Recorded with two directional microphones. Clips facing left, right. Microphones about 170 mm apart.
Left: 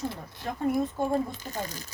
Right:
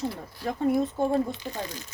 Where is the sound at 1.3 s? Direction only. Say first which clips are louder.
Right 2 dB; 45° left (ahead or behind).